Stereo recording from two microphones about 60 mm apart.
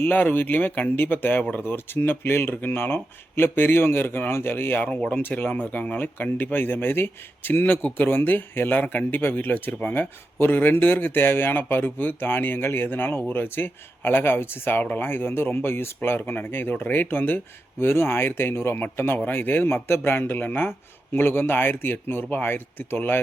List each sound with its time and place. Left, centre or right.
0.0 s speech: left